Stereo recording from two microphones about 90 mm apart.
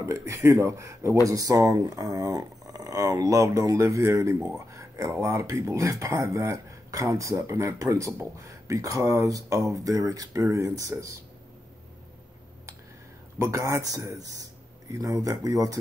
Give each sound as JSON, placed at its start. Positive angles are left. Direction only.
{"t": 0.0, "sound": "speech", "side_deg": -35}
{"t": 13.4, "sound": "speech", "side_deg": -35}